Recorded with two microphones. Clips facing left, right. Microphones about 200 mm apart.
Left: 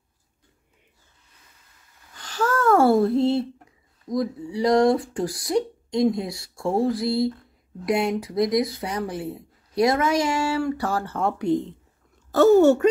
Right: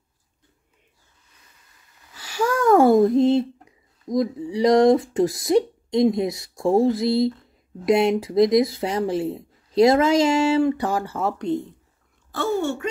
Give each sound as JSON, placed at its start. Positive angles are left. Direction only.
{"t": 2.1, "sound": "a sound", "side_deg": -10}
{"t": 4.1, "sound": "speech", "side_deg": -20}
{"t": 11.3, "sound": "speech", "side_deg": 10}
{"t": 12.3, "sound": "speech", "side_deg": 40}